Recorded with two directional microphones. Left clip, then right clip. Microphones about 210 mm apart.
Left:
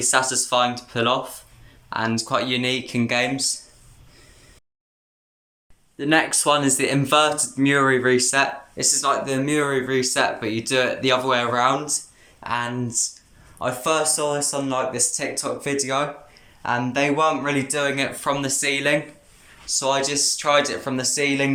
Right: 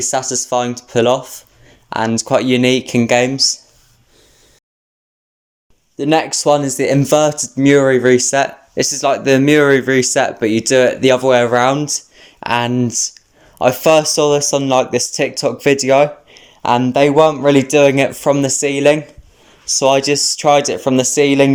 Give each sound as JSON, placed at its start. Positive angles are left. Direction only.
{"t": 0.0, "sound": "speech", "side_deg": -30}
{"t": 6.0, "sound": "speech", "side_deg": -20}